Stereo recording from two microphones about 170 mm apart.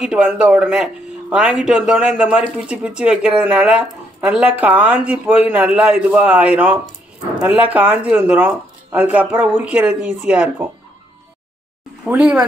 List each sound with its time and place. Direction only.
0.0 s speech: 5° right (ahead or behind)
12.0 s speech: 5° right (ahead or behind)